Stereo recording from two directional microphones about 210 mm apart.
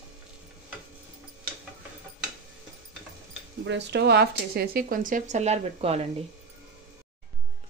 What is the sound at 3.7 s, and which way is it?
Speech, 55° right (ahead or behind).